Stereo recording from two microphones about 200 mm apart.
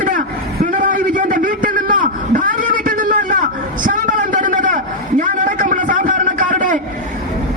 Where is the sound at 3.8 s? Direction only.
40° right (ahead or behind).